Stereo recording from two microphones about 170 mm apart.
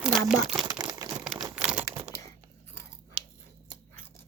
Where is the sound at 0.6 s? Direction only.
20° right (ahead or behind).